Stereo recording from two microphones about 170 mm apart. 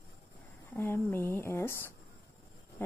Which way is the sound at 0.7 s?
15° left (ahead or behind).